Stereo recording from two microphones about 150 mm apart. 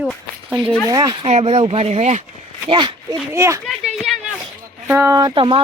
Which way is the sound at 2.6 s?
30° right (ahead or behind).